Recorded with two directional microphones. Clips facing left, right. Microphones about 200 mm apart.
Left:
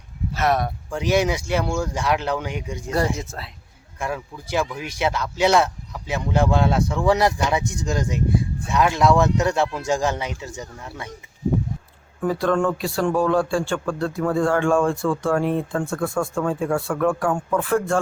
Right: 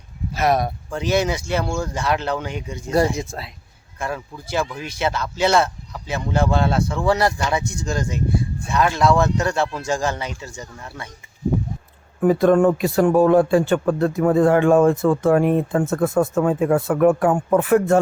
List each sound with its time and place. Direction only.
0.3 s speech: 10° right (ahead or behind)
0.9 s speech: 10° left (ahead or behind)
3.2 s speech: 15° right (ahead or behind)
4.0 s speech: 15° left (ahead or behind)
12.2 s speech: 20° right (ahead or behind)